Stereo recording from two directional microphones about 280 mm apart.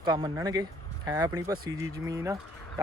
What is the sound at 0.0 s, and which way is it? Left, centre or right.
Speech, centre.